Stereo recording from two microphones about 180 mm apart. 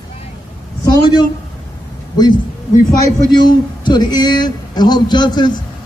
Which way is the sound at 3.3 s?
25° left (ahead or behind).